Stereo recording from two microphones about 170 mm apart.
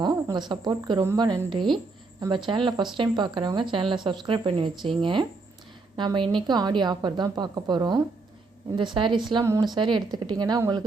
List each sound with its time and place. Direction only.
0.0 s a woman's voice: 25° right (ahead or behind)
9.4 s speech: 15° right (ahead or behind)
9.7 s speech: 30° right (ahead or behind)